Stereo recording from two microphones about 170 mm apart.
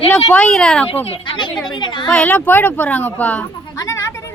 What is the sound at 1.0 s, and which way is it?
A woman's voice, 30° left (ahead or behind).